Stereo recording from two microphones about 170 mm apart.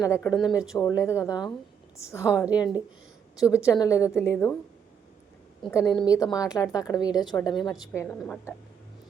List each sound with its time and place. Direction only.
0.0 s a woman's voice: 15° left (ahead or behind)
0.3 s speech: 5° right (ahead or behind)
0.8 s a woman's voice: 20° left (ahead or behind)
3.7 s a woman's voice: 20° left (ahead or behind)
5.7 s a woman's voice: 25° left (ahead or behind)
8.0 s a woman's voice: 5° left (ahead or behind)